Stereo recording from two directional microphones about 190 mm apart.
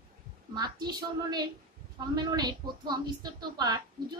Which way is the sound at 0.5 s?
20° right (ahead or behind).